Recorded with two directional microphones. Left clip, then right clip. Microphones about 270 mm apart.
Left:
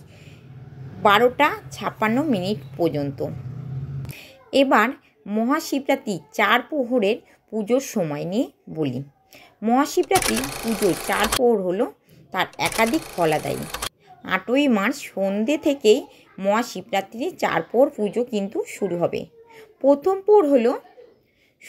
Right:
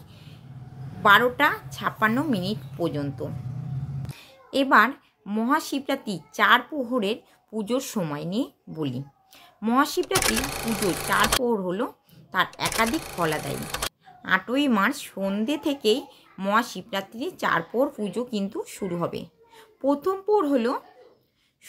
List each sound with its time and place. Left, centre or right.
1.0 s speech: centre
4.1 s a sound: centre
4.6 s speech: centre